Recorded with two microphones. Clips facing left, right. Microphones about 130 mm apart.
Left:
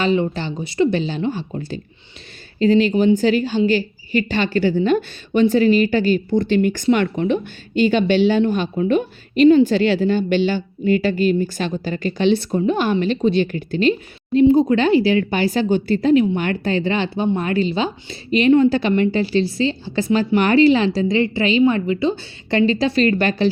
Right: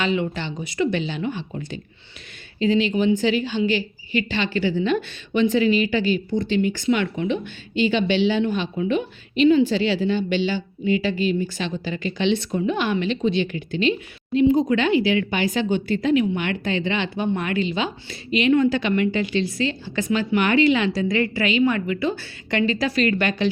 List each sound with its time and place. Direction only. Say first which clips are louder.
0.0 s a woman's voice: left 5 dB; 35° left (ahead or behind)